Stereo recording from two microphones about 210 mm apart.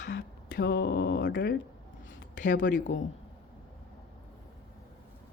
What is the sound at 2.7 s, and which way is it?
Speech, 35° left (ahead or behind).